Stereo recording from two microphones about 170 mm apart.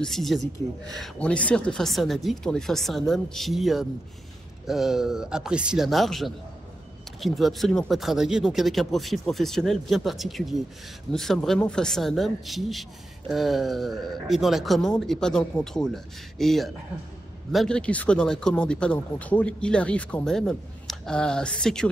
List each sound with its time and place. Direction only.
0.0 s speech: centre (ahead or behind)